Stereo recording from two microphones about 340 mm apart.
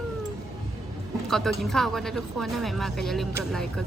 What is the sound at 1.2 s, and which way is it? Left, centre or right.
Speech, centre.